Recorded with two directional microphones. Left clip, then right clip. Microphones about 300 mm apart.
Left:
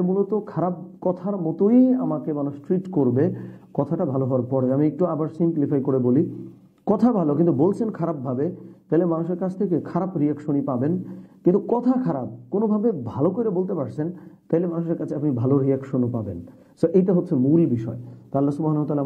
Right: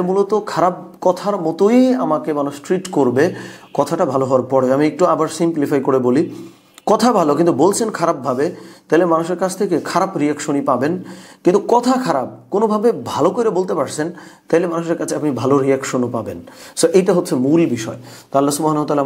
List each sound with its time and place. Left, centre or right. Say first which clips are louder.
0.0 s speech: right 7 dB; centre
3.2 s speech: right 7 dB; centre
11.5 s speech: right 11 dB; right
11.8 s speech: right 6 dB; centre
12.1 s speech: right 9 dB; centre
13.4 s speech: right 8 dB; centre